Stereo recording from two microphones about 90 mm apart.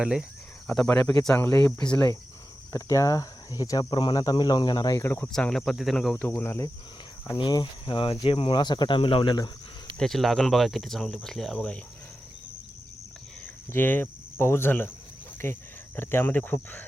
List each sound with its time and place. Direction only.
0.0 s speech: 10° right (ahead or behind)
1.4 s speech: 20° left (ahead or behind)
2.7 s speech: 35° left (ahead or behind); by 4.9 s 50° left (ahead or behind)
4.9 s speech: 30° left (ahead or behind)
5.3 s speech: 5° left (ahead or behind)
6.1 s speech: 25° left (ahead or behind)
7.3 s speech: 60° left (ahead or behind)
9.0 s speech: 80° left
10.0 s speech: 5° left (ahead or behind)
13.7 s cricket: 20° left (ahead or behind)
15.4 s speech: 25° left (ahead or behind)